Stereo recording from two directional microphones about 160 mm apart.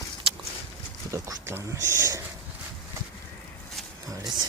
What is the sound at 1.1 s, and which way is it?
Speech, 20° right (ahead or behind).